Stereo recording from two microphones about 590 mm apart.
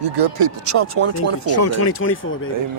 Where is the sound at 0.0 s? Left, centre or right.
Right.